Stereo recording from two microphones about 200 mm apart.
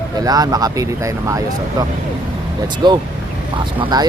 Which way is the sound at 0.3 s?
20° right (ahead or behind).